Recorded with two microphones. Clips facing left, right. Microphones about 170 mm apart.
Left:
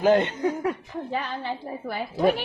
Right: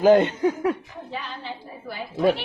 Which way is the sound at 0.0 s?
25° right (ahead or behind).